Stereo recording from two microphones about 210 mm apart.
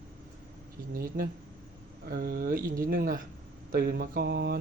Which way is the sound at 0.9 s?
45° right (ahead or behind).